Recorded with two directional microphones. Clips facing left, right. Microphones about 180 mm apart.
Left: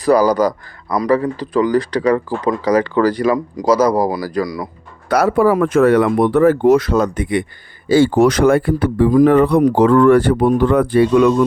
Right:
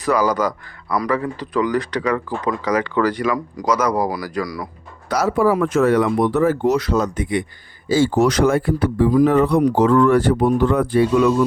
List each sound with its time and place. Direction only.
0.0 s speech: 35° left (ahead or behind)
5.0 s speech: 55° left (ahead or behind)